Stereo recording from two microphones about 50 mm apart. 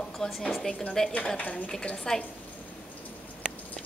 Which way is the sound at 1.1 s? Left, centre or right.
Left.